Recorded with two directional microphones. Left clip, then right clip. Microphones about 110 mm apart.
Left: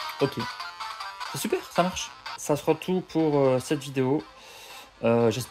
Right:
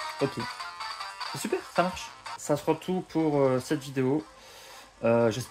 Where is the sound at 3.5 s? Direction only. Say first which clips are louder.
Left 3 dB; 55° left (ahead or behind).